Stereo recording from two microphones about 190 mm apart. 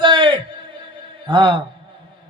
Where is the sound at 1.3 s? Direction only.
25° right (ahead or behind).